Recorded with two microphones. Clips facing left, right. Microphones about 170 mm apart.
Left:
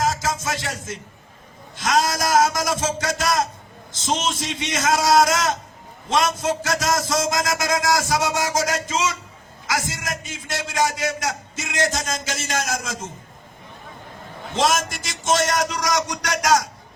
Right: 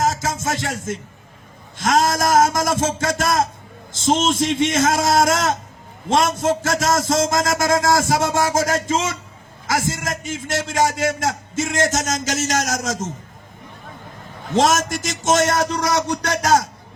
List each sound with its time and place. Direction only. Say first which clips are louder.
0.0 s a sound: right 2 dB; 50° right (ahead or behind)
1.8 s a man's voice: right 3 dB; 50° right (ahead or behind)
14.5 s a man's voice: right 4 dB; 50° right (ahead or behind)
15.5 s speech: right 3 dB; 30° right (ahead or behind)